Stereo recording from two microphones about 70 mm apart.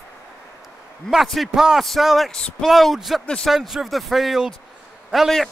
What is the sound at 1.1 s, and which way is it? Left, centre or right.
A man's voice, centre.